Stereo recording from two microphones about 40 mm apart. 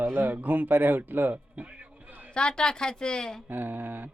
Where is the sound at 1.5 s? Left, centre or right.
Right.